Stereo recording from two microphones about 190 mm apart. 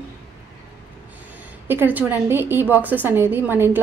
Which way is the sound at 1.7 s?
10° right (ahead or behind).